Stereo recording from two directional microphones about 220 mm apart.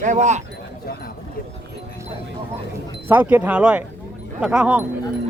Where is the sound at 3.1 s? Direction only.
10° right (ahead or behind).